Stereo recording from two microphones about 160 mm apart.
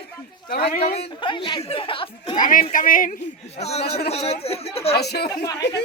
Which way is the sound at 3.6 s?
40° left (ahead or behind).